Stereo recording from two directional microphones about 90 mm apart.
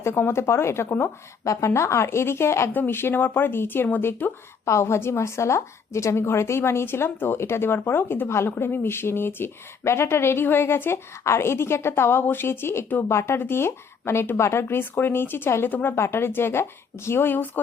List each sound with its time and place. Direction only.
0.0 s a woman's voice: 30° left (ahead or behind)